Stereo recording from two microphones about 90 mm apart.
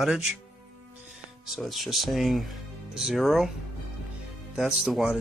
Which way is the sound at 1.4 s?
Centre (ahead or behind).